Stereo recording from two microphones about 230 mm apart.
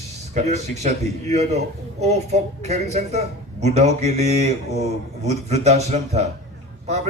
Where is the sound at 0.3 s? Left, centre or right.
Right.